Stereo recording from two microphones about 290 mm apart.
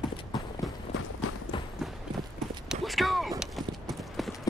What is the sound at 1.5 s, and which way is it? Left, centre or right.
Clip-clop, centre.